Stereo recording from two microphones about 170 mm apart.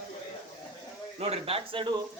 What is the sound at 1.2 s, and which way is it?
Speech, 35° right (ahead or behind).